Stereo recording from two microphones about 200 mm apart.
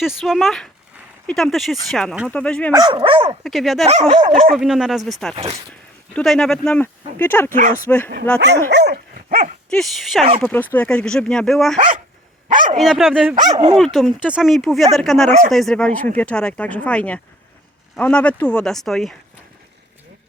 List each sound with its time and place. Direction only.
0.0 s speech: centre (ahead or behind)
2.7 s speech: 25° right (ahead or behind)
3.4 s speech: centre (ahead or behind)
5.3 s speech: 30° right (ahead or behind)
6.1 s speech: centre (ahead or behind)
8.4 s dog: 55° right (ahead or behind)
9.6 s speech: centre (ahead or behind)
12.5 s dog: 40° right (ahead or behind)
12.7 s speech: centre (ahead or behind)
13.5 s speech: 20° right (ahead or behind)
13.7 s speech: centre (ahead or behind)
15.3 s speech: 40° right (ahead or behind)
15.5 s speech: 5° left (ahead or behind)